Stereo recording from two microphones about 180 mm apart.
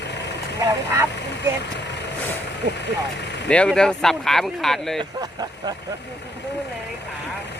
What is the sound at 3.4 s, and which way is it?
Speech, 5° left (ahead or behind).